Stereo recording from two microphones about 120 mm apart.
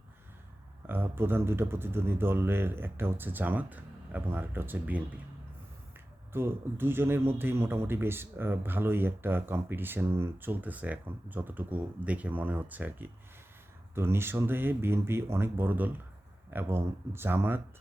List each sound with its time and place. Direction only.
0.9 s speech: 15° right (ahead or behind)
6.3 s speech: 20° right (ahead or behind)